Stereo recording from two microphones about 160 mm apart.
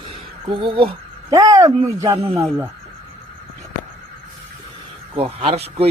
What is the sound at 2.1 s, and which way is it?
Speech, 35° right (ahead or behind).